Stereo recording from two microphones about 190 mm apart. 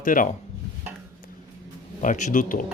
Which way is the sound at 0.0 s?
45° left (ahead or behind).